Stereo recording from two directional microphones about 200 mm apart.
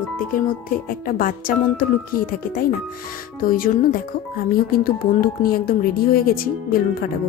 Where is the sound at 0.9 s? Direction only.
45° left (ahead or behind).